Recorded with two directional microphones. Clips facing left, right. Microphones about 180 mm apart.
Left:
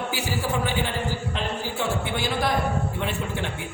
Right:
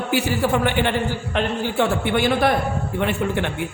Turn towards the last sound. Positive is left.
turn(degrees=-60)  # may be behind; listen again after turning